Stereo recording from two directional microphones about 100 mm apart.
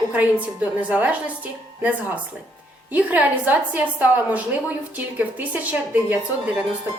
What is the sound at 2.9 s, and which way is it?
A woman's voice, 15° right (ahead or behind).